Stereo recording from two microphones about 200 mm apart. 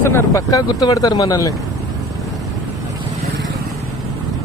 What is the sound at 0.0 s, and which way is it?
Speech, 10° left (ahead or behind).